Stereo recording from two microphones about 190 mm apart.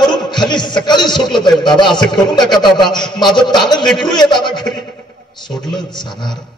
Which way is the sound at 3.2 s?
25° left (ahead or behind).